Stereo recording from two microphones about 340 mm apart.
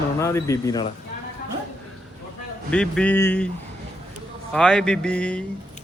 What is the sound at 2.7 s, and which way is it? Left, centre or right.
Speech, centre.